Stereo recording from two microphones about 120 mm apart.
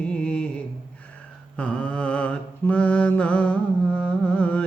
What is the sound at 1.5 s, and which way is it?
Mantra, 10° left (ahead or behind).